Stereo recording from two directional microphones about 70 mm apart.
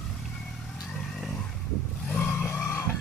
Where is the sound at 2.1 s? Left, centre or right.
Left.